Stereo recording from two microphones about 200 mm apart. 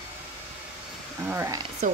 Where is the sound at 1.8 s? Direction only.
40° right (ahead or behind).